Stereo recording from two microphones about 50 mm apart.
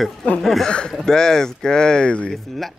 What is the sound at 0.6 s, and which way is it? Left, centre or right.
Speech, centre.